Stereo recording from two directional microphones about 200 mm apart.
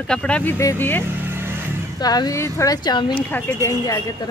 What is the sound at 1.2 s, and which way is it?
Vehicle, 10° right (ahead or behind).